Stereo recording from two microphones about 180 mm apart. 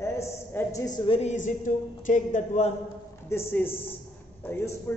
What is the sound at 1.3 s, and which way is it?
Speech, 45° left (ahead or behind).